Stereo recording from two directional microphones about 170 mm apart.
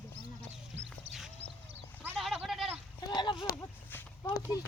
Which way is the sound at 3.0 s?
25° left (ahead or behind).